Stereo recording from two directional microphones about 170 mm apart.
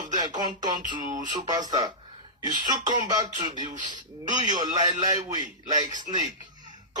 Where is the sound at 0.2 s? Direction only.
25° right (ahead or behind).